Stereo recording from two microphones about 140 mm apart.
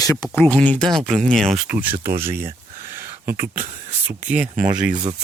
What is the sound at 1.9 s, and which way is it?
Speech, 90° right.